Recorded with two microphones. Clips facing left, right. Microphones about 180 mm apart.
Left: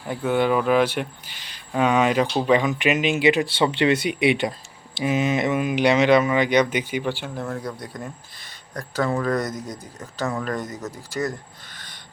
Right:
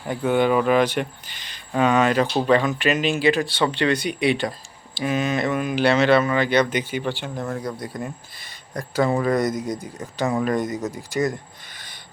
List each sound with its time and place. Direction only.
0.1 s speech: centre (ahead or behind)
7.4 s speech: centre (ahead or behind)